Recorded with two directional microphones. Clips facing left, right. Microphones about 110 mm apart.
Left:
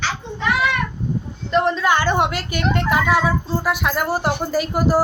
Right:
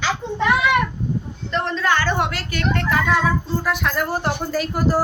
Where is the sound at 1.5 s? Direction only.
10° left (ahead or behind).